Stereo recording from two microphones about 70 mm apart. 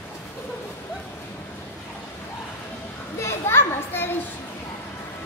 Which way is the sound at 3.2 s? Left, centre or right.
Left.